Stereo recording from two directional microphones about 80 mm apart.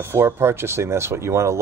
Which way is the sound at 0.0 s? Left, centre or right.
Right.